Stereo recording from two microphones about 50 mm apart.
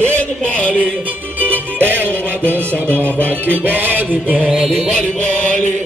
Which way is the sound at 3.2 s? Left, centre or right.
Left.